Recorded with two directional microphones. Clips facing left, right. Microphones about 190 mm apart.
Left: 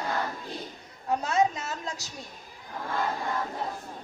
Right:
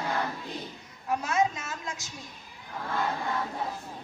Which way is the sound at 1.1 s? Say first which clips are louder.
Left 2 dB; 35° left (ahead or behind).